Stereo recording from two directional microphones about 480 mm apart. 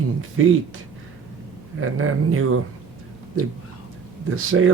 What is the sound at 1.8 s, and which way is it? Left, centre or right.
Speech, right.